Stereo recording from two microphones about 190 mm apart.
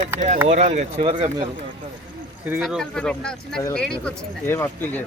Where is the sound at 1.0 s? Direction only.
25° right (ahead or behind).